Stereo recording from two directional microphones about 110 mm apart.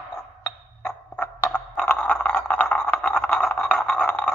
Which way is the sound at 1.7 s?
10° left (ahead or behind).